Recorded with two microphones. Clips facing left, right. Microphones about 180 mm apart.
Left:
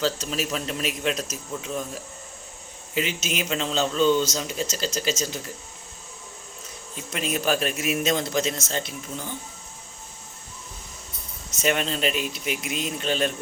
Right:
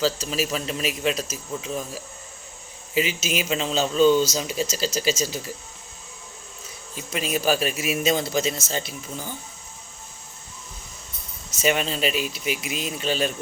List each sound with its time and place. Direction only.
0.0 s a man's voice: 5° right (ahead or behind)
6.9 s a man's voice: 5° right (ahead or behind)
11.5 s a man's voice: 5° right (ahead or behind)